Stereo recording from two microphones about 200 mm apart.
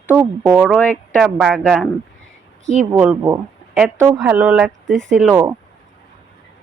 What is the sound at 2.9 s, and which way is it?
A woman's voice, 10° right (ahead or behind).